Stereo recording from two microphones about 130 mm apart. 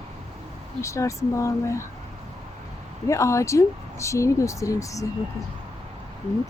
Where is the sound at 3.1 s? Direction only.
20° left (ahead or behind).